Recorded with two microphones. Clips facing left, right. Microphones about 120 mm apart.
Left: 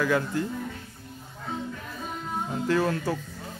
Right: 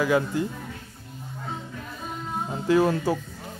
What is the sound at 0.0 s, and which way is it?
Speech, 15° right (ahead or behind).